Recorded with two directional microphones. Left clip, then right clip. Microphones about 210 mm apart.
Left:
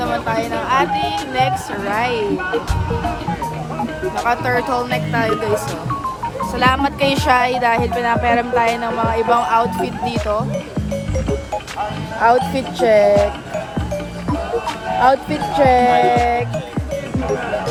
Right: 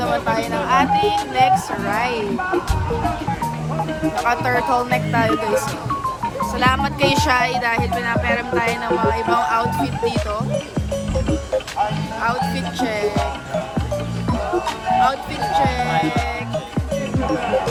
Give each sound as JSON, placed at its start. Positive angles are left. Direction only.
{"t": 0.0, "sound": "speech", "side_deg": 0}
{"t": 4.2, "sound": "speech", "side_deg": 0}
{"t": 6.6, "sound": "speech", "side_deg": 5}
{"t": 12.2, "sound": "speech", "side_deg": 50}
{"t": 15.5, "sound": "speech", "side_deg": 45}